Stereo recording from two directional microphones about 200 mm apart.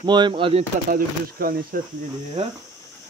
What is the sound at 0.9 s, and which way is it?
Speech, 45° right (ahead or behind).